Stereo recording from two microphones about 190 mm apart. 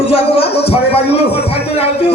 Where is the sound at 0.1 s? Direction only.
30° left (ahead or behind).